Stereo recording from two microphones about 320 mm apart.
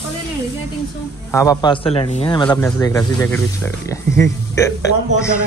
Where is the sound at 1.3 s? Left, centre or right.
Centre.